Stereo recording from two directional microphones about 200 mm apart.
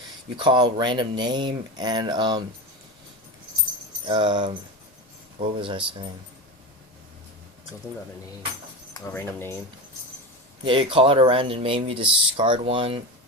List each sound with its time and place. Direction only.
0.3 s speech: 25° right (ahead or behind)
4.0 s speech: 25° right (ahead or behind)
5.5 s speech: 25° right (ahead or behind)
8.9 s speech: 10° left (ahead or behind)
10.6 s speech: 25° right (ahead or behind)